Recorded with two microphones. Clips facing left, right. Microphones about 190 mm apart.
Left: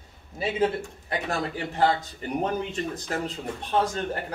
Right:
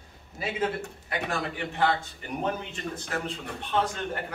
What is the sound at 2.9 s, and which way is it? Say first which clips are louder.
Speech: left 2 dB; 40° left (ahead or behind).